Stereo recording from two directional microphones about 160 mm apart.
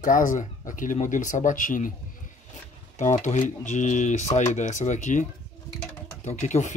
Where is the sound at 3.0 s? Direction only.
50° left (ahead or behind).